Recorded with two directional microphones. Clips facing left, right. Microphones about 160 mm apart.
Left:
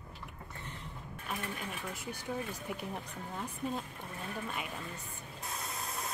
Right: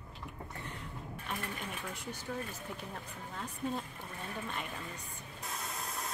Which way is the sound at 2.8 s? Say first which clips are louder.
Left 3 dB; 10° left (ahead or behind).